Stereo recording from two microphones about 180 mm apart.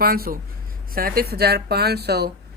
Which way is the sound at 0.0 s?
55° right (ahead or behind).